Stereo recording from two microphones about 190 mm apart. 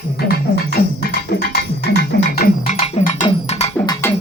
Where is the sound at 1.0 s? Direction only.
55° left (ahead or behind).